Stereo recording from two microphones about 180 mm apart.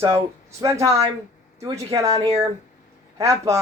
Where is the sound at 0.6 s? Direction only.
20° right (ahead or behind).